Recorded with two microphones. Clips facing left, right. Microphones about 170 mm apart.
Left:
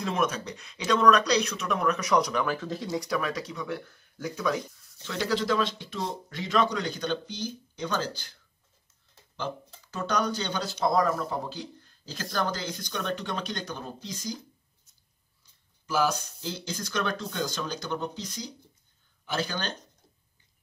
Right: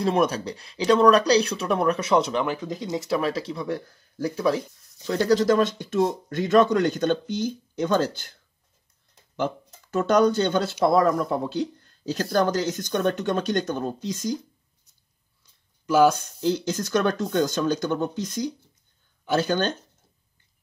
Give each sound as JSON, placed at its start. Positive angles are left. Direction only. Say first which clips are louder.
{"t": 0.0, "sound": "a man's voice", "louder": "right 6 dB", "side_deg": -35}
{"t": 10.0, "sound": "a man's voice", "louder": "right 9 dB", "side_deg": -55}
{"t": 16.1, "sound": "a man's voice", "louder": "right 10 dB", "side_deg": -55}